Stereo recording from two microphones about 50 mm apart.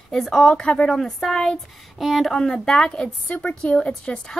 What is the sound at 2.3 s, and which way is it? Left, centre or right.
A woman's voice, centre.